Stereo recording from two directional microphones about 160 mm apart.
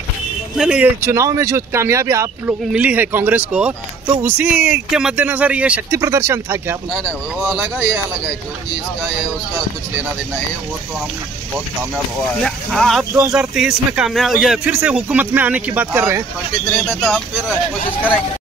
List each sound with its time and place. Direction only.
0.6 s speech: 5° right (ahead or behind)
6.9 s speech: 5° right (ahead or behind)
12.4 s speech: 5° left (ahead or behind); by 16.3 s 15° right (ahead or behind)
17.0 s speech: 5° left (ahead or behind)